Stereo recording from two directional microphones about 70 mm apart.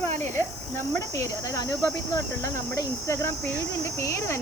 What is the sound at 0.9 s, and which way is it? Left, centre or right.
Speech, left.